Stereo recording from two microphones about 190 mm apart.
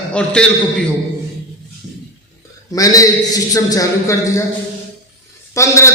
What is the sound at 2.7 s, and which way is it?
A man's voice, 20° left (ahead or behind).